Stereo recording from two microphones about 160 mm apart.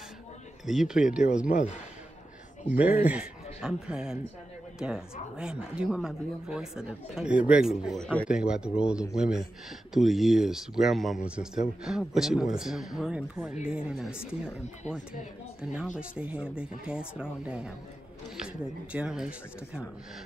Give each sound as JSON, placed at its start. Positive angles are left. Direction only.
{"t": 0.7, "sound": "speech", "side_deg": -5}
{"t": 1.5, "sound": "a man's voice", "side_deg": 50}
{"t": 2.8, "sound": "a man's voice", "side_deg": -10}
{"t": 8.3, "sound": "speech", "side_deg": -5}
{"t": 15.6, "sound": "speech", "side_deg": -5}